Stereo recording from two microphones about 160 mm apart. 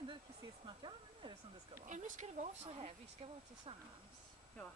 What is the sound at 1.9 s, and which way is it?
Speech, 50° right (ahead or behind).